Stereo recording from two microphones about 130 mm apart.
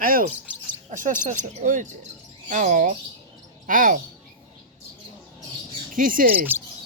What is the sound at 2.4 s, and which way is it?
Speech, 75° right (ahead or behind).